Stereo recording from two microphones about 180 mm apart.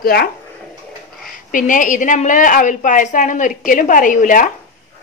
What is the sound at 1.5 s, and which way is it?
A woman's voice, 45° left (ahead or behind).